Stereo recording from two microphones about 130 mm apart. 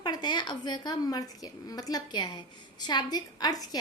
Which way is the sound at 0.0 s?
30° left (ahead or behind).